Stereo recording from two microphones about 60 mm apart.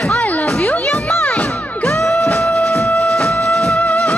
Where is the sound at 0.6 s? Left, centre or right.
Left.